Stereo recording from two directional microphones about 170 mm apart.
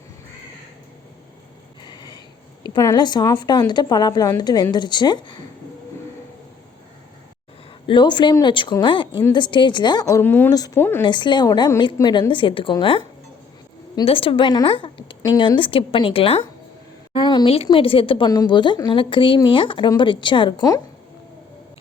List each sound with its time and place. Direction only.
1.8 s a sound: 25° left (ahead or behind)
2.6 s speech: 25° left (ahead or behind)
7.9 s a woman's voice: 25° left (ahead or behind); by 11.0 s 10° left (ahead or behind)
11.0 s a woman's voice: 25° left (ahead or behind)